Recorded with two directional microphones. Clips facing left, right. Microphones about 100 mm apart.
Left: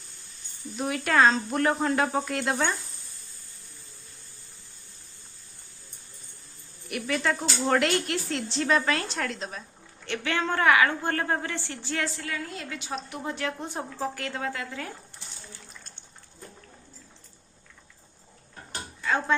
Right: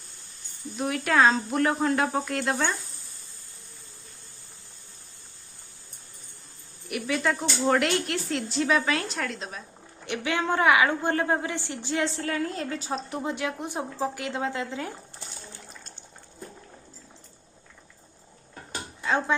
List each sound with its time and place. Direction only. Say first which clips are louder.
0.8 s a woman's voice: even; centre (ahead or behind)
6.8 s a woman's voice: right 1 dB; 5° right (ahead or behind)
10.1 s a woman's voice: right 1 dB; 15° right (ahead or behind)
12.0 s a woman's voice: right 5 dB; 35° right (ahead or behind)
13.2 s speech: right 2 dB; 15° right (ahead or behind)